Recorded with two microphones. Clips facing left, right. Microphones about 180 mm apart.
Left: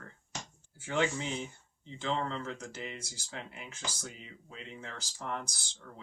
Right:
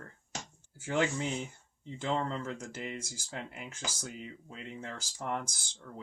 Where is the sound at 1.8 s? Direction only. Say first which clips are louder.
Right 1 dB; 45° right (ahead or behind).